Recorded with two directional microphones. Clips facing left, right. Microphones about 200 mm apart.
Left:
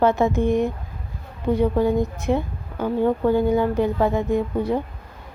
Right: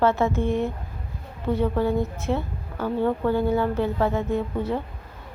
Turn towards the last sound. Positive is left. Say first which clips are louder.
# left 4 dB
turn(degrees=15)  # may be behind; listen again after turning